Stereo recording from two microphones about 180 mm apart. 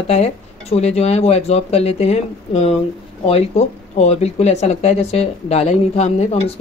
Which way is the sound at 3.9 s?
35° left (ahead or behind).